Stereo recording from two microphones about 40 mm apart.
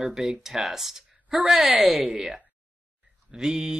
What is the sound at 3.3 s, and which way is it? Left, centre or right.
Speech, centre.